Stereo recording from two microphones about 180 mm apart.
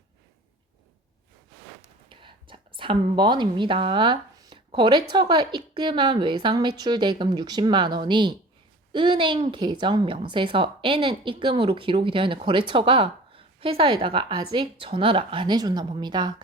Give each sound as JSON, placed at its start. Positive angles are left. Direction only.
{"t": 2.0, "sound": "a woman's voice", "side_deg": -30}